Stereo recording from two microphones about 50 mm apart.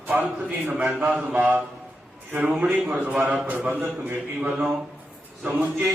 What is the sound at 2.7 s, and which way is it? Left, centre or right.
A man's voice, right.